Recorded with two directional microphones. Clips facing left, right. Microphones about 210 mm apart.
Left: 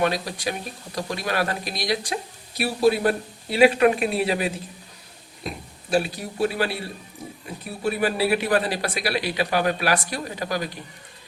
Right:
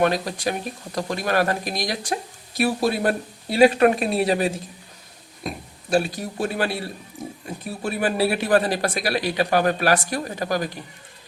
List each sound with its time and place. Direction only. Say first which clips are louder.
0.0 s speech: right 3 dB; 50° right (ahead or behind)
5.9 s speech: right 2 dB; 45° right (ahead or behind)
7.8 s speech: even; 45° right (ahead or behind)